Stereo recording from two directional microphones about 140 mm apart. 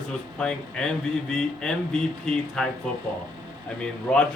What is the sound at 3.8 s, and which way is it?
Speech, 5° left (ahead or behind).